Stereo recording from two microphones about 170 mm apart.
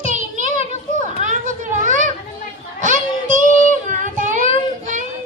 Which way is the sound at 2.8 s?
50° right (ahead or behind).